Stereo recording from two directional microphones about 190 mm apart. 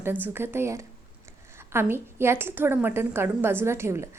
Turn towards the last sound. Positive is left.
turn(degrees=-15)  # may be behind; listen again after turning